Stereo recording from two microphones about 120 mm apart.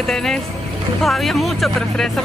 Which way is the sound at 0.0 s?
5° left (ahead or behind).